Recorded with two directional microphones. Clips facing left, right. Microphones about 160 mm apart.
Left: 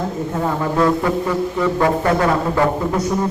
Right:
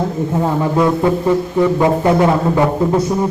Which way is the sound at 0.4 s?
20° right (ahead or behind).